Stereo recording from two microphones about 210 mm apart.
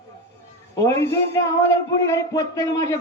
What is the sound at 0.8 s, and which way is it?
A man's voice, 15° left (ahead or behind).